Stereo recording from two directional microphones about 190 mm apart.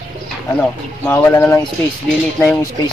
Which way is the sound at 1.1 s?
10° left (ahead or behind).